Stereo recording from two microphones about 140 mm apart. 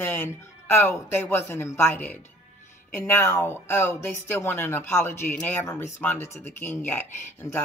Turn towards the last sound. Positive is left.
turn(degrees=15)  # may be behind; listen again after turning